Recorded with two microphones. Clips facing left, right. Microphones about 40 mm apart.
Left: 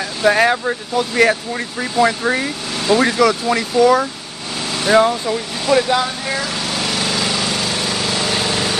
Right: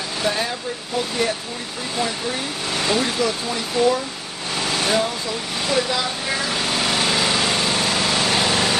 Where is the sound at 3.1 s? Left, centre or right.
Left.